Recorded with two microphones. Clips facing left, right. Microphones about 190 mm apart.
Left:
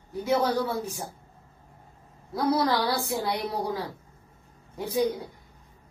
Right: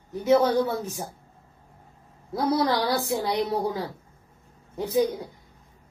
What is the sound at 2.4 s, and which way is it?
Speech, 25° right (ahead or behind).